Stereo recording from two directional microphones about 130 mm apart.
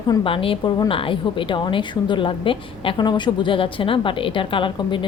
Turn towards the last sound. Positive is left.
turn(degrees=40)  # may be behind; listen again after turning